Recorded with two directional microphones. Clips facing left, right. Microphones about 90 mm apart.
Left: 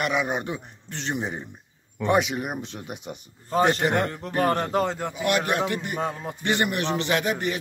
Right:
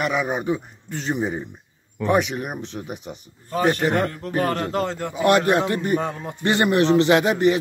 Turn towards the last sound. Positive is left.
turn(degrees=-25)  # may be behind; listen again after turning